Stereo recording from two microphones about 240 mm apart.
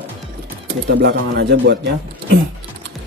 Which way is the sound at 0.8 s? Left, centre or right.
Right.